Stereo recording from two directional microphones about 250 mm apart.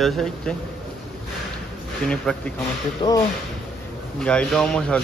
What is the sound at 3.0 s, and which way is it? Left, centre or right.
Speech, centre.